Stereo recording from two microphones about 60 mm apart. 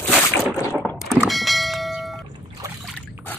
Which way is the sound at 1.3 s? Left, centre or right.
Centre.